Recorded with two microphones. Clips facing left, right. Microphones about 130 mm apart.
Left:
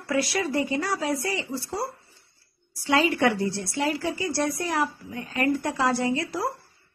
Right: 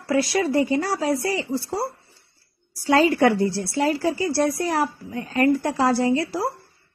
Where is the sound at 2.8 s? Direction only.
40° right (ahead or behind).